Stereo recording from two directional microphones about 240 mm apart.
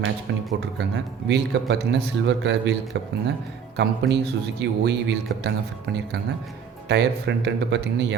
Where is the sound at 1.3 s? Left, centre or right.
Right.